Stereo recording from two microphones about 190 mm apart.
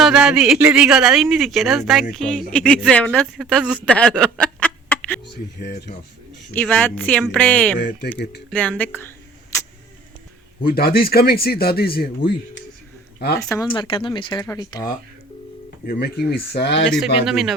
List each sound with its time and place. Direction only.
0.0 s speech: centre (ahead or behind)
5.5 s speech: 60° left (ahead or behind)
6.5 s speech: 10° left (ahead or behind)
7.8 s speech: 50° left (ahead or behind)
8.4 s speech: 10° left (ahead or behind)
10.6 s speech: 55° left (ahead or behind)
13.5 s speech: 20° left (ahead or behind)
15.9 s speech: 55° left (ahead or behind)
16.9 s speech: centre (ahead or behind)